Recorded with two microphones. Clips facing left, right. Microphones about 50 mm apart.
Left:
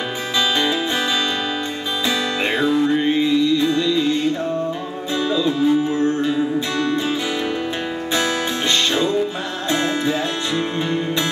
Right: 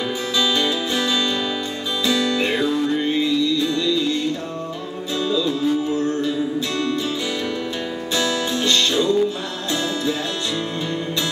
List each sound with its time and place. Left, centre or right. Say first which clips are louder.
0.4 s music: left 2 dB; left
2.0 s music: right 2 dB; left
8.2 s music: right 1 dB; left